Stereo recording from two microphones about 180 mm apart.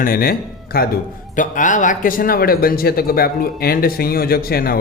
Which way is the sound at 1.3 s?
45° left (ahead or behind).